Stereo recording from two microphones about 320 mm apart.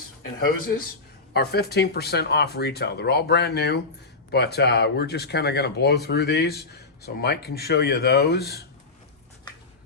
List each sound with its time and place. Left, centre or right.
0.3 s speech: left